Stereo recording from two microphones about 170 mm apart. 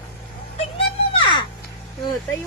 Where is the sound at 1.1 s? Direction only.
30° left (ahead or behind).